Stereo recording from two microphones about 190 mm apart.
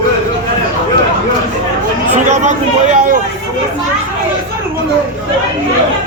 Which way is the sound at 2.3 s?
40° right (ahead or behind).